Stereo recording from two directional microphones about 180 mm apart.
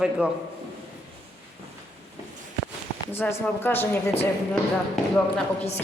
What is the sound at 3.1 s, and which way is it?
Speech, 10° left (ahead or behind).